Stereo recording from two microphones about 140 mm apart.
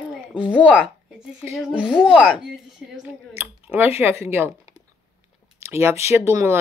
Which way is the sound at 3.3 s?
15° right (ahead or behind).